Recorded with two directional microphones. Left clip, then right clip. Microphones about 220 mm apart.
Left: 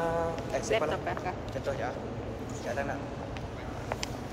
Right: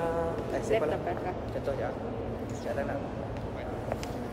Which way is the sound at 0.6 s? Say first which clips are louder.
Right 1 dB; 15° left (ahead or behind).